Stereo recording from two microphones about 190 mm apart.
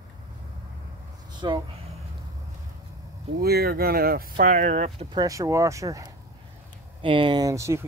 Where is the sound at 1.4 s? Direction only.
25° right (ahead or behind).